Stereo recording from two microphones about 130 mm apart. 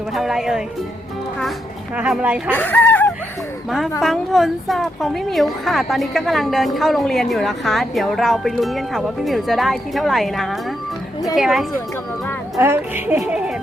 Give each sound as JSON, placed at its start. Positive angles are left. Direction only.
{"t": 0.1, "sound": "a woman's voice", "side_deg": 0}
{"t": 2.0, "sound": "speech", "side_deg": -10}
{"t": 2.5, "sound": "speech", "side_deg": 15}
{"t": 4.0, "sound": "a woman's voice", "side_deg": 0}
{"t": 12.5, "sound": "speech", "side_deg": -20}
{"t": 13.2, "sound": "speech", "side_deg": -5}